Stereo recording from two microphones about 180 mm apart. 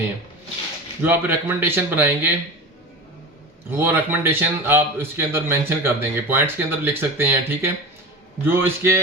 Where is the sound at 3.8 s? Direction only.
15° right (ahead or behind).